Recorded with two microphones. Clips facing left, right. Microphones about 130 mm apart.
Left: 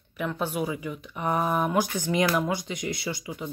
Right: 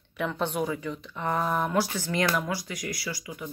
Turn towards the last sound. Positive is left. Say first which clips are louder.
# left 3 dB
turn(degrees=25)  # may be behind; listen again after turning